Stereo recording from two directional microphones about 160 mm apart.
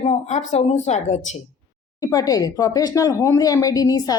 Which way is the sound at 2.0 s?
25° left (ahead or behind).